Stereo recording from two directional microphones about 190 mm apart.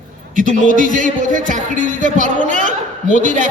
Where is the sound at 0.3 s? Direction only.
45° right (ahead or behind).